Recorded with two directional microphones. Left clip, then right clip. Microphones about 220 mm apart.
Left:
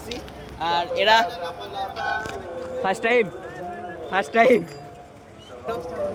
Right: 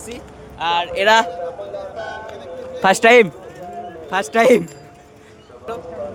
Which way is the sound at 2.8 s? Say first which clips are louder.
Right 10 dB; 45° right (ahead or behind).